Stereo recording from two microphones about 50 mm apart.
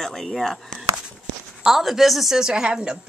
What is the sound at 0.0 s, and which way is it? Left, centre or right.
Speech, centre.